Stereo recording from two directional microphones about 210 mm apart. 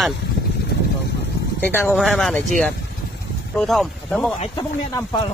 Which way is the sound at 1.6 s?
5° left (ahead or behind).